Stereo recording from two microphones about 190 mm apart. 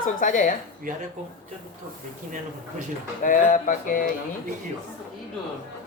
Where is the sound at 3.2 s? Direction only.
45° left (ahead or behind).